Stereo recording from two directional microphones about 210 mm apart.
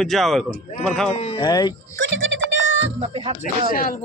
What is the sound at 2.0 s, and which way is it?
Music, 65° right (ahead or behind).